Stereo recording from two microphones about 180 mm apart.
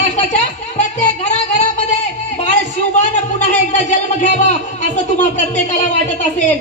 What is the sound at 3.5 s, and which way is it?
A man's voice, 40° left (ahead or behind).